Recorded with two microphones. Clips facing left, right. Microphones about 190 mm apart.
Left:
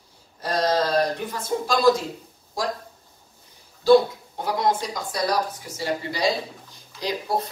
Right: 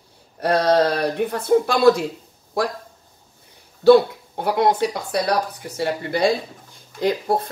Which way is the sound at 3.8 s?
65° right (ahead or behind).